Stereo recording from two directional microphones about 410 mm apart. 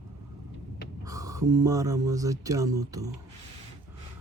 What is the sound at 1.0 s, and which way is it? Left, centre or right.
Speech, centre.